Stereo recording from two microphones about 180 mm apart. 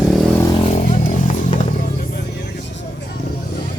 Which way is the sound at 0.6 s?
40° left (ahead or behind).